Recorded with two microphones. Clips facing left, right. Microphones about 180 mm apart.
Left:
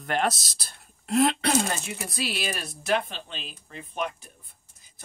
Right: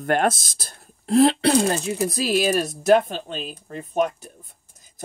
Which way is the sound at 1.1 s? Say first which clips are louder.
Right 6 dB; 30° right (ahead or behind).